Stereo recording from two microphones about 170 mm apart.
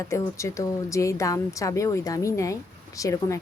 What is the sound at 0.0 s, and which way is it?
Speech, 15° left (ahead or behind).